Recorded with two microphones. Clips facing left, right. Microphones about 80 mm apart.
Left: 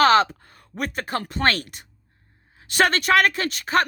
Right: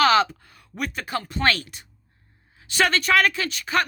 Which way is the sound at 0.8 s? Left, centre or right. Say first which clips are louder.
Left 2 dB; left.